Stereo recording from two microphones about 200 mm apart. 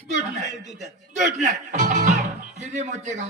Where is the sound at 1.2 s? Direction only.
35° right (ahead or behind).